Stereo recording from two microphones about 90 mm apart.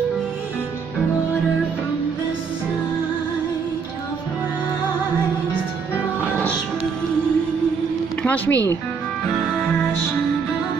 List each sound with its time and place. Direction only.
8.2 s speech: 20° left (ahead or behind)